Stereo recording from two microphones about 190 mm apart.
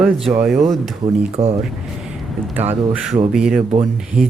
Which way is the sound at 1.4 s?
35° right (ahead or behind).